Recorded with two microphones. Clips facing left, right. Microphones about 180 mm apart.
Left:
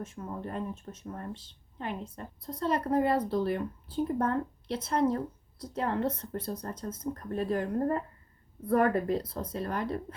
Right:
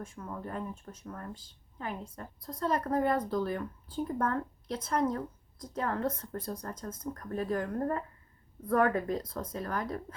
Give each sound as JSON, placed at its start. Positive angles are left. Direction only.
{"t": 0.0, "sound": "a woman's voice", "side_deg": 25}
{"t": 9.3, "sound": "a woman's voice", "side_deg": 30}